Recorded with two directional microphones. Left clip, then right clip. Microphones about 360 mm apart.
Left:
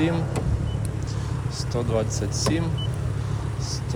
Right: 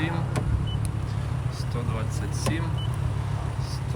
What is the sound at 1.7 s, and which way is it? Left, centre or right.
Speech, centre.